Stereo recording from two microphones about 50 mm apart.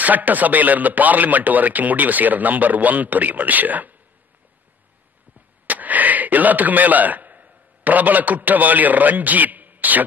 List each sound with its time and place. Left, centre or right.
0.0 s speech: right
5.7 s a man's voice: right